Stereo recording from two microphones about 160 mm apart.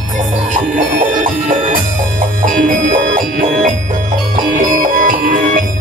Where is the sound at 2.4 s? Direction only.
55° right (ahead or behind).